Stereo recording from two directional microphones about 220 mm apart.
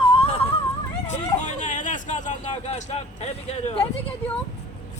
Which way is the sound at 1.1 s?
35° left (ahead or behind).